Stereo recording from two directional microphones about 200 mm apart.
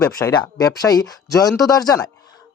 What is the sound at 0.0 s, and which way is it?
Speech, 15° left (ahead or behind).